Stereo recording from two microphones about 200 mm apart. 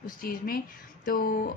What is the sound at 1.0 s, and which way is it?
Speech, 45° left (ahead or behind).